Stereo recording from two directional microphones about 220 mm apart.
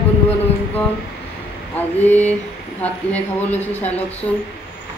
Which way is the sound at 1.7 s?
10° left (ahead or behind).